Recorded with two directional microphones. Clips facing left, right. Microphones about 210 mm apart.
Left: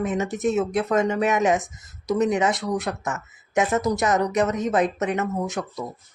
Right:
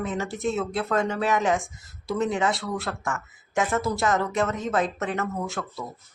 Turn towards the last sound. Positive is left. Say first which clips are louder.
# left 4 dB
turn(degrees=20)  # may be behind; listen again after turning